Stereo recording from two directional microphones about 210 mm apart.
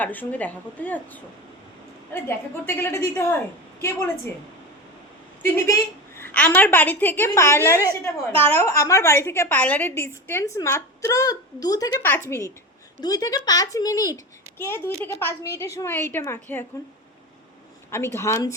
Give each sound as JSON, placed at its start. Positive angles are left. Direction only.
{"t": 0.0, "sound": "a woman's voice", "side_deg": 10}
{"t": 5.4, "sound": "a woman's voice", "side_deg": 10}
{"t": 17.9, "sound": "a woman's voice", "side_deg": 10}